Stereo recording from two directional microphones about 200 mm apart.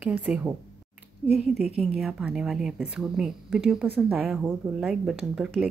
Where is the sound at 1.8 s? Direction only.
Centre (ahead or behind).